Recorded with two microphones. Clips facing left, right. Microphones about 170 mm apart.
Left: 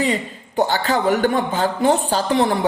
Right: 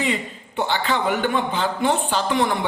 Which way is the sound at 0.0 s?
40° left (ahead or behind).